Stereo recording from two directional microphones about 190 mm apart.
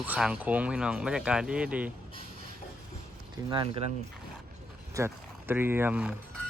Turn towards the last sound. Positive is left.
turn(degrees=-5)  # may be behind; listen again after turning